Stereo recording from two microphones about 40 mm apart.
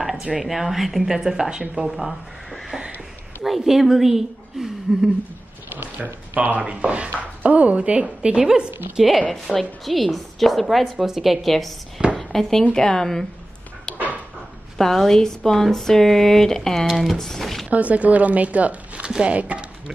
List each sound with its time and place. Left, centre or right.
0.4 s a woman's voice: centre
1.9 s a woman's voice: centre
6.3 s speech: right
6.6 s a woman's voice: right
9.3 s a woman's voice: centre
11.4 s a woman's voice: centre
12.2 s a sound: centre
12.7 s speech: centre
13.9 s dog: centre
14.8 s a woman's voice: centre
16.8 s a woman's voice: centre
17.6 s speech: right
19.0 s speech: centre
19.3 s speech: right